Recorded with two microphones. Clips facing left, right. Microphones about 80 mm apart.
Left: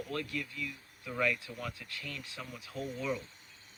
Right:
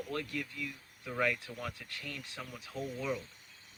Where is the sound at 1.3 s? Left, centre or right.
Right.